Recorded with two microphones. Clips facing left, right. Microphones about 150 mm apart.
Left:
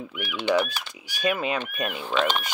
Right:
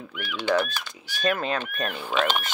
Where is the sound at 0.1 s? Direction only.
10° left (ahead or behind).